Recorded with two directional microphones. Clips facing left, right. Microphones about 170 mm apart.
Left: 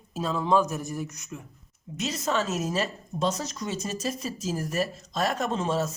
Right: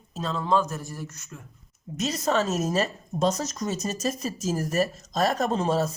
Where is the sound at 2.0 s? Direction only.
40° right (ahead or behind).